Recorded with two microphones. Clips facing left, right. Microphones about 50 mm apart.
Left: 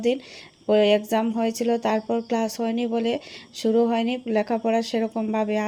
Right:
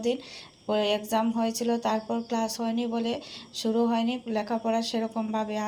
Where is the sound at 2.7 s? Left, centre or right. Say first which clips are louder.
Left 5 dB; left.